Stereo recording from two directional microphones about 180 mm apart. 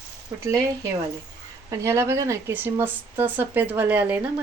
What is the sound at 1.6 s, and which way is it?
Speech, 15° right (ahead or behind).